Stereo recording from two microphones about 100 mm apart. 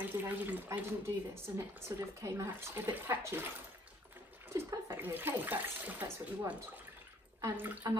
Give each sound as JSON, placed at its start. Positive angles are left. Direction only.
{"t": 0.0, "sound": "speech", "side_deg": -20}
{"t": 4.6, "sound": "speech", "side_deg": -25}